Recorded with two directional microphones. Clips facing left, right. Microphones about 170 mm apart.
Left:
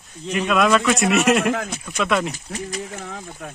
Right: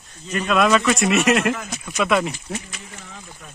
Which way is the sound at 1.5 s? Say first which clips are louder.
Left 3 dB; 55° left (ahead or behind).